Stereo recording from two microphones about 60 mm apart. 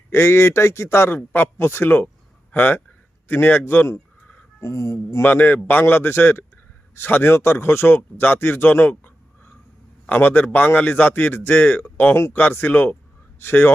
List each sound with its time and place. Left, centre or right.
0.1 s a man's voice: left
4.6 s speech: left
5.2 s a man's voice: left